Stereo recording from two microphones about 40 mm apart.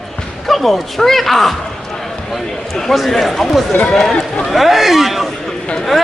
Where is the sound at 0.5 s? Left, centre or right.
Centre.